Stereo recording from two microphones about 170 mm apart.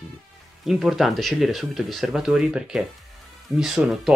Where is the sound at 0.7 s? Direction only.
Centre (ahead or behind).